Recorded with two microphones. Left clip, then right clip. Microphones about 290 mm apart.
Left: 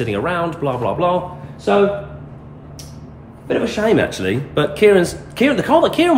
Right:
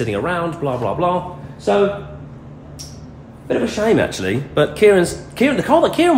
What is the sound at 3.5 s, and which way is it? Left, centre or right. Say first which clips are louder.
Speech: even; centre.